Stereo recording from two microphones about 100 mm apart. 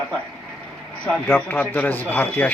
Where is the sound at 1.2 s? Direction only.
20° left (ahead or behind).